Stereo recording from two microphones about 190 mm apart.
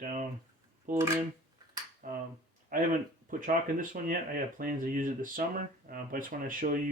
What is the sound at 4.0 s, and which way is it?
Speech, 45° right (ahead or behind).